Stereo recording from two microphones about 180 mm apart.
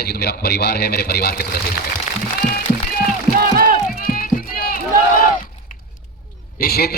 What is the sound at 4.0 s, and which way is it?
Run, 55° left (ahead or behind).